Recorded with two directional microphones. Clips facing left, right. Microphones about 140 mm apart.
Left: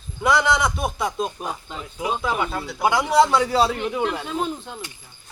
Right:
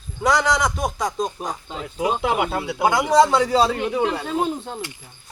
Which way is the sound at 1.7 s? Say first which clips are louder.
Right 5 dB; 30° right (ahead or behind).